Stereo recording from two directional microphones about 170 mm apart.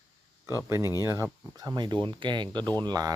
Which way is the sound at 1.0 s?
20° right (ahead or behind).